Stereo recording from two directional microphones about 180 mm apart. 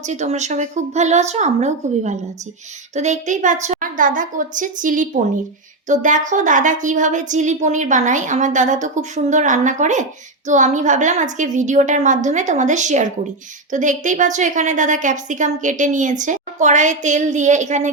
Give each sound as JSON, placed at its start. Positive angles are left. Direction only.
{"t": 0.0, "sound": "a woman's voice", "side_deg": -40}